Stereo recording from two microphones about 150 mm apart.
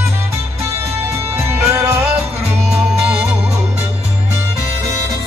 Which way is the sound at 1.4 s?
20° right (ahead or behind).